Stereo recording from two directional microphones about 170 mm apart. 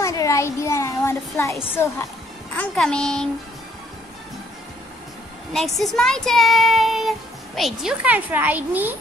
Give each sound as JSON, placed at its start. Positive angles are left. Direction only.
{"t": 0.0, "sound": "speech", "side_deg": 15}
{"t": 5.5, "sound": "speech", "side_deg": 0}